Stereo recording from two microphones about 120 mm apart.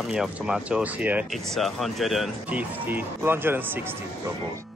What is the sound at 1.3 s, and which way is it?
Speech, centre (ahead or behind).